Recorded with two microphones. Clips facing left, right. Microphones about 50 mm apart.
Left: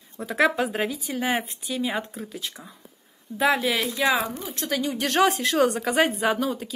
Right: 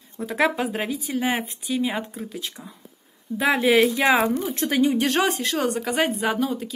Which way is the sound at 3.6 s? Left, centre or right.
Right.